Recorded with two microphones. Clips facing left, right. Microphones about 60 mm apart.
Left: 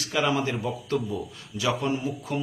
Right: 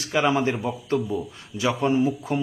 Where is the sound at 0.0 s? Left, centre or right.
Right.